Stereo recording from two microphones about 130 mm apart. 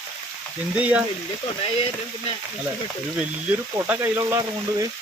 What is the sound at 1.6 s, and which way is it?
Speech, 45° left (ahead or behind).